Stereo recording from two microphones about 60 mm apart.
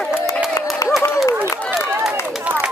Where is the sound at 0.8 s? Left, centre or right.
Left.